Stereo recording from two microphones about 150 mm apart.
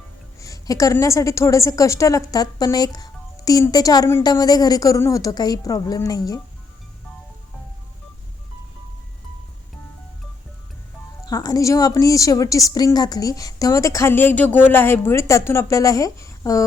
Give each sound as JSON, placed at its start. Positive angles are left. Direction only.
{"t": 0.3, "sound": "a woman's voice", "side_deg": 20}
{"t": 11.3, "sound": "a woman's voice", "side_deg": 25}